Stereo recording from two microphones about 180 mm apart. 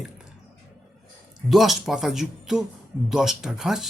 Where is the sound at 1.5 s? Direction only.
Centre (ahead or behind).